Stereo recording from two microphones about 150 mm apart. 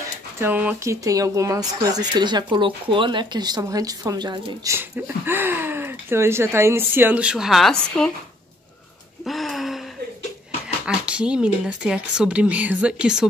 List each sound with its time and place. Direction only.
0.4 s speech: 10° right (ahead or behind)
1.0 s speech: 20° right (ahead or behind)
4.7 s speech: 15° right (ahead or behind); by 8.1 s 5° left (ahead or behind)
9.2 s gasp: centre (ahead or behind)
10.9 s speech: 5° right (ahead or behind)